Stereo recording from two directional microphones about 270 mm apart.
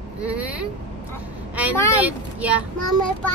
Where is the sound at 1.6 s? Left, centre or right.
Centre.